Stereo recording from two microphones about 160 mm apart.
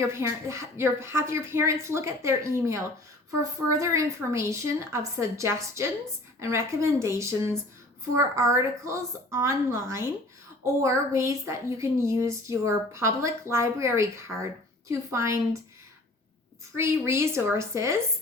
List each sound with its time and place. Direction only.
0.0 s a woman's voice: 15° right (ahead or behind)
16.7 s a woman's voice: 15° right (ahead or behind)